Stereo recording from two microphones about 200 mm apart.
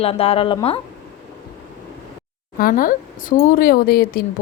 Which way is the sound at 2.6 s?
45° left (ahead or behind).